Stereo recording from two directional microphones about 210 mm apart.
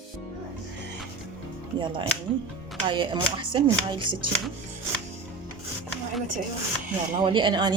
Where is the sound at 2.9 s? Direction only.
20° right (ahead or behind).